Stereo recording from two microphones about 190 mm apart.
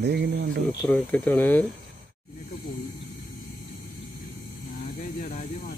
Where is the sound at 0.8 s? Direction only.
10° left (ahead or behind).